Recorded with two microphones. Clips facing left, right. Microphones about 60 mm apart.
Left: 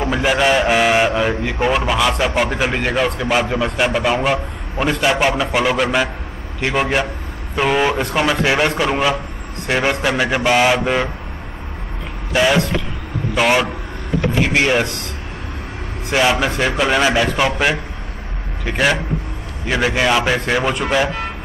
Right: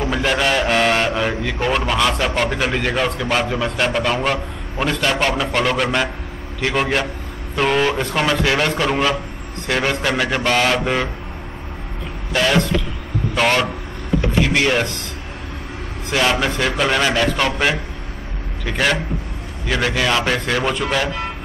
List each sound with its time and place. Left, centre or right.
0.0 s a man's voice: centre
12.3 s a man's voice: centre
16.1 s a man's voice: centre